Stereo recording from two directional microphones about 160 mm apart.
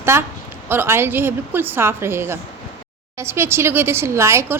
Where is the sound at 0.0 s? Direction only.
15° right (ahead or behind).